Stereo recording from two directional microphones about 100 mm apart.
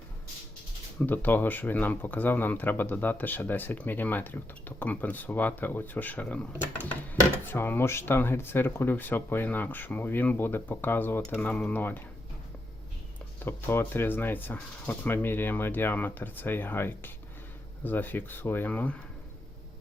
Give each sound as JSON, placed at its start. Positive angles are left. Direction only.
{"t": 0.9, "sound": "speech", "side_deg": 20}
{"t": 13.4, "sound": "speech", "side_deg": 25}